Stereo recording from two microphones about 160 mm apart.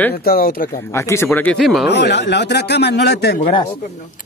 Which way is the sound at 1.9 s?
90° left.